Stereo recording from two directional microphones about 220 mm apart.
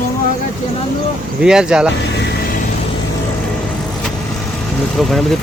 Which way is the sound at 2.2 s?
50° left (ahead or behind).